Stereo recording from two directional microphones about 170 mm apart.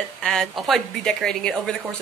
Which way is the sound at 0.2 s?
5° left (ahead or behind).